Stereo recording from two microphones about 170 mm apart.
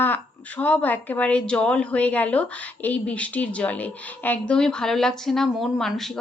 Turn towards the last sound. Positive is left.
turn(degrees=0)  # may be behind; listen again after turning